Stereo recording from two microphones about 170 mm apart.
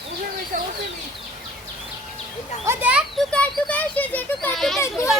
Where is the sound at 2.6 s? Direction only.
10° right (ahead or behind).